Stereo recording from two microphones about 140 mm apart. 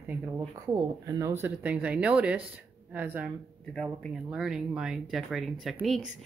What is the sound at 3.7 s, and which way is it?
Speech, centre (ahead or behind).